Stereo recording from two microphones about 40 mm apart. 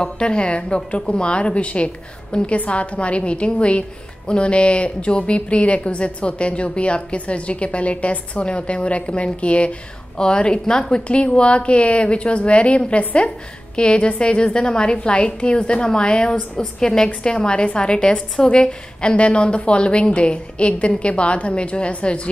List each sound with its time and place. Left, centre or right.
0.0 s a woman's voice: left
10.1 s a woman's voice: left